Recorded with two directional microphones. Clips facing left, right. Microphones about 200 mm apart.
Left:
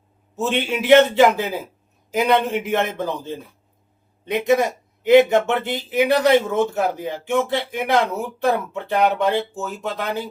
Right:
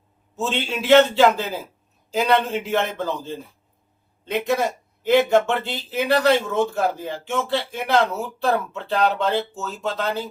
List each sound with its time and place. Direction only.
0.3 s speech: 15° left (ahead or behind)